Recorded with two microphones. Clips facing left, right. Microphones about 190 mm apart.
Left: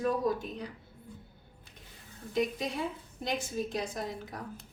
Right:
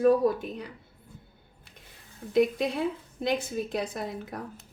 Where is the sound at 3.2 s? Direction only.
60° right (ahead or behind).